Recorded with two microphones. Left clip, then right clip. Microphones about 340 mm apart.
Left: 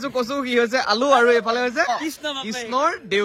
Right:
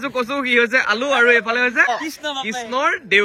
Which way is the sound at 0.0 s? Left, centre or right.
Centre.